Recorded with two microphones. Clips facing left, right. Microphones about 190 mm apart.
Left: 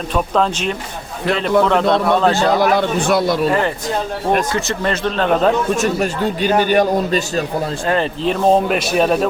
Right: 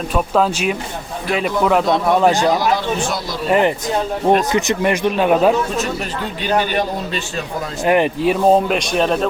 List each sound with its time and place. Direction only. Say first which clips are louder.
0.1 s speech: even; 5° right (ahead or behind)
2.6 s a man's voice: left 3 dB; 60° left (ahead or behind)
4.3 s speech: right 3 dB; 15° right (ahead or behind)
5.7 s a man's voice: left 4 dB; 45° left (ahead or behind)
7.9 s speech: right 5 dB; 15° right (ahead or behind); by 9.2 s 5° left (ahead or behind)